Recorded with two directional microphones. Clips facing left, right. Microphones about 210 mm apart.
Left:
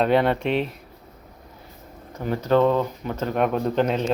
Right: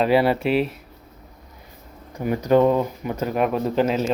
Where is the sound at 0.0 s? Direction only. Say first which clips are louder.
Right 1 dB; 5° right (ahead or behind).